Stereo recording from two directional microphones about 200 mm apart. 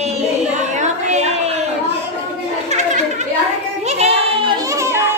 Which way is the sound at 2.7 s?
35° right (ahead or behind).